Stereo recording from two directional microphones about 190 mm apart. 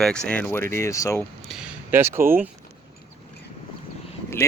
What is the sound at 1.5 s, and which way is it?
Speech, 5° right (ahead or behind).